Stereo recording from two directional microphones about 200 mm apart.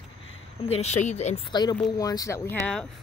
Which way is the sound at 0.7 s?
35° left (ahead or behind).